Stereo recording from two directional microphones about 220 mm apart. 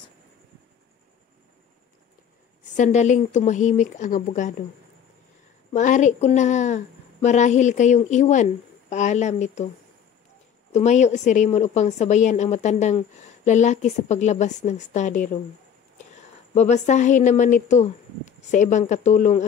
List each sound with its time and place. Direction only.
2.7 s a woman's voice: 30° left (ahead or behind)
5.7 s a woman's voice: 35° left (ahead or behind)
10.7 s a woman's voice: 30° left (ahead or behind)
16.5 s a woman's voice: 30° left (ahead or behind)